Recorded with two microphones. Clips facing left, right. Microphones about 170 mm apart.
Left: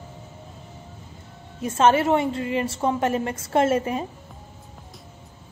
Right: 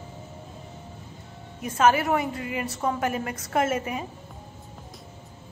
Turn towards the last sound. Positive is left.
turn(degrees=30)  # may be behind; listen again after turning